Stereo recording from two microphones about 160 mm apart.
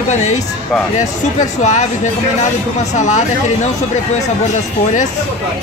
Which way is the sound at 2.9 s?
50° left (ahead or behind).